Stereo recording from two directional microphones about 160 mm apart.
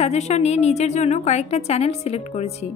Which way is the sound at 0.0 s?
45° left (ahead or behind).